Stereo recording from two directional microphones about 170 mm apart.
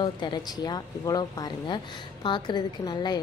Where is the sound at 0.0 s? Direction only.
25° left (ahead or behind).